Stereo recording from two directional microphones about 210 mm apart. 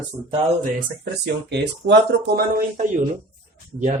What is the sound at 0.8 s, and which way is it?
Speech, 55° right (ahead or behind).